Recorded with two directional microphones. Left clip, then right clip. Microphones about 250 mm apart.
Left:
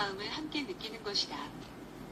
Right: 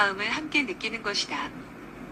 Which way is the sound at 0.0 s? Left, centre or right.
Right.